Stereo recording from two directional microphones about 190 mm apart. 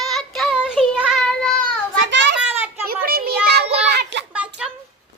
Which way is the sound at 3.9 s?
65° right (ahead or behind).